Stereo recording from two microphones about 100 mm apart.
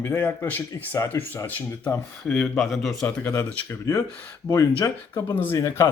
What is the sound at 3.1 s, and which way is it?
Speech, 25° left (ahead or behind).